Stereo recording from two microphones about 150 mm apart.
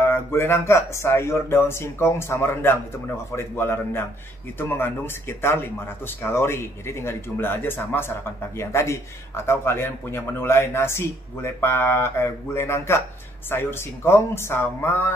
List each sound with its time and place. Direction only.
0.0 s a man's voice: 15° left (ahead or behind)